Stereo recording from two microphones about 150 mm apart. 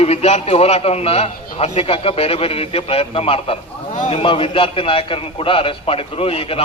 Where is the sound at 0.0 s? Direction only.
45° left (ahead or behind).